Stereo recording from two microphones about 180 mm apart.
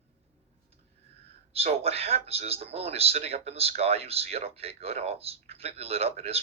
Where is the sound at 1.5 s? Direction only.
35° right (ahead or behind).